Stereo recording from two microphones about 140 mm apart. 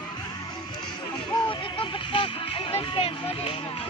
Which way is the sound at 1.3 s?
30° left (ahead or behind).